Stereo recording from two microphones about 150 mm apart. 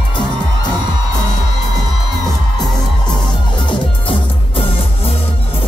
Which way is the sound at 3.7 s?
40° left (ahead or behind).